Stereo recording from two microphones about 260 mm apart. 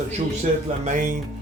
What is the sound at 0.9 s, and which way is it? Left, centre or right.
Speech, right.